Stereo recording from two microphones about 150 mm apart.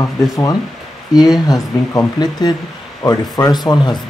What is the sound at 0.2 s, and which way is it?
Speech, 20° left (ahead or behind).